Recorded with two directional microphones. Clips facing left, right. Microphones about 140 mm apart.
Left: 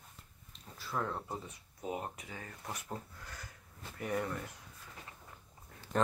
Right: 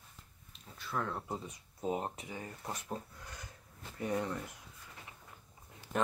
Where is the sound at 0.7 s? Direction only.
5° left (ahead or behind).